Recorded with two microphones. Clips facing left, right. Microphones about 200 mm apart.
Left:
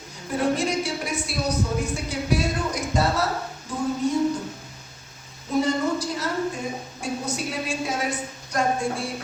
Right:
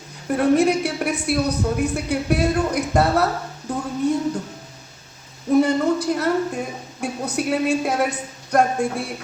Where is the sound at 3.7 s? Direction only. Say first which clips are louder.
Right 3 dB; 60° right (ahead or behind).